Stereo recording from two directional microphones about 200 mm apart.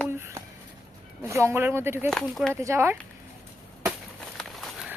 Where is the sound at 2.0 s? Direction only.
Centre (ahead or behind).